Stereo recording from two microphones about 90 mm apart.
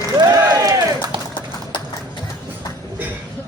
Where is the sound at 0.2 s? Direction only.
40° right (ahead or behind).